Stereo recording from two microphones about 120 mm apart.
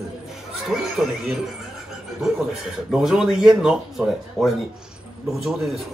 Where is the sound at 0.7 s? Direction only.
5° right (ahead or behind).